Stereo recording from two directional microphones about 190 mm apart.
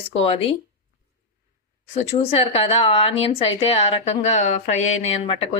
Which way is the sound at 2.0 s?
30° left (ahead or behind).